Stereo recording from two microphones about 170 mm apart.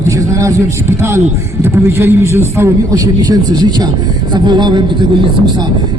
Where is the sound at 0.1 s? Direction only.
20° right (ahead or behind).